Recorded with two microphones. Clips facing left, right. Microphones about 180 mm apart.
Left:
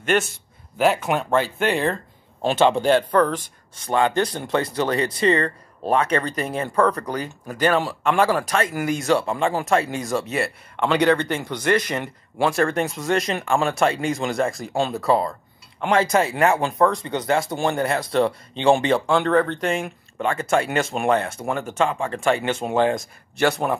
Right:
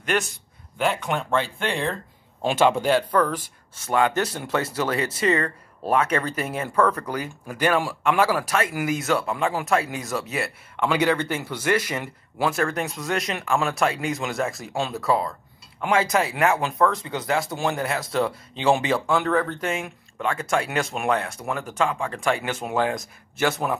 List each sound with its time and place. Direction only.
0.7 s speech: 5° left (ahead or behind)
2.4 s speech: 10° right (ahead or behind)
5.2 s speech: 30° left (ahead or behind)
5.9 s speech: 10° right (ahead or behind)
6.7 s speech: 10° left (ahead or behind)
7.1 s speech: 10° right (ahead or behind)
9.1 s speech: 30° left (ahead or behind)
9.4 s speech: 5° right (ahead or behind)